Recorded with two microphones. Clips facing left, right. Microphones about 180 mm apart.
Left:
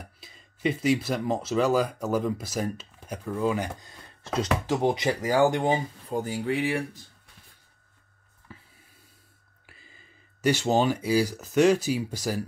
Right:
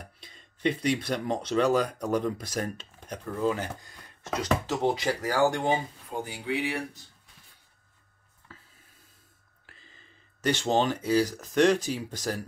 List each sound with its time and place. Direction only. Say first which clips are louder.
0.0 s speech: left 1 dB; 5° left (ahead or behind)
4.2 s speech: left 3 dB; 30° left (ahead or behind)
4.6 s speech: left 2 dB; 15° left (ahead or behind)
6.0 s speech: left 5 dB; 40° left (ahead or behind)
8.5 s a sound: left 4 dB; 15° left (ahead or behind)
9.7 s speech: left 1 dB; 10° left (ahead or behind)